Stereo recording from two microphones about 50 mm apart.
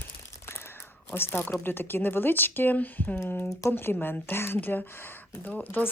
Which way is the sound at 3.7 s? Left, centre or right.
Left.